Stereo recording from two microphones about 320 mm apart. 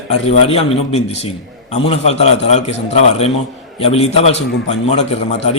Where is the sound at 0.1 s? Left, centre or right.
Centre.